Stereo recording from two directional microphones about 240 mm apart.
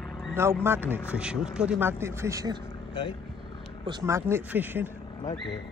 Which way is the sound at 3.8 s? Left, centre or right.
Centre.